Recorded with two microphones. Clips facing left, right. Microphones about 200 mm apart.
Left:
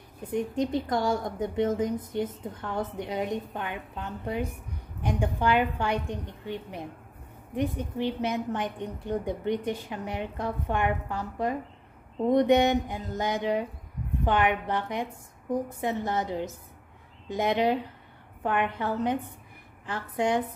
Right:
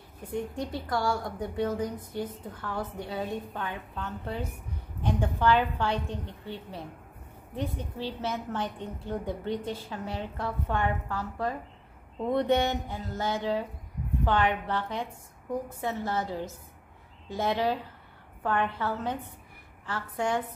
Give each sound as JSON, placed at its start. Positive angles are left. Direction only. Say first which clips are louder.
{"t": 0.3, "sound": "a woman's voice", "louder": "left 5 dB", "side_deg": 20}